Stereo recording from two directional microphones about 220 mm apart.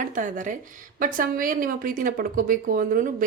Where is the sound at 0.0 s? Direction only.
35° right (ahead or behind).